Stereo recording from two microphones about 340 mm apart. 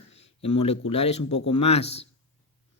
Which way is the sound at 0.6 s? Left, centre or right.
Centre.